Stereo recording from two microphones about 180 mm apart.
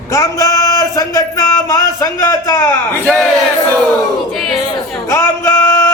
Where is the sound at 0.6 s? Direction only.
15° left (ahead or behind).